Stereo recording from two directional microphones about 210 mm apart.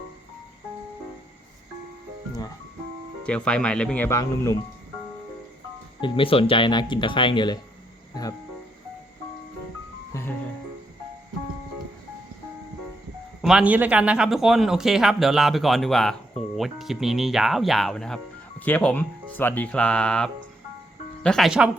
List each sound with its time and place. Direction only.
3.2 s speech: 5° left (ahead or behind)
6.0 s speech: 25° left (ahead or behind)
10.1 s music: 10° left (ahead or behind)
13.4 s speech: 5° right (ahead or behind)